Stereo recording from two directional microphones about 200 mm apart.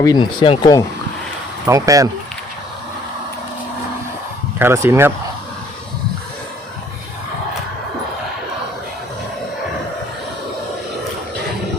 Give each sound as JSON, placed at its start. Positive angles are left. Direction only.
{"t": 0.0, "sound": "speech", "side_deg": 20}
{"t": 1.6, "sound": "speech", "side_deg": -15}
{"t": 4.6, "sound": "speech", "side_deg": -10}